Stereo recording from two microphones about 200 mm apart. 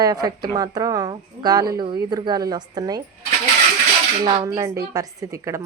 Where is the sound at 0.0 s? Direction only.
20° right (ahead or behind).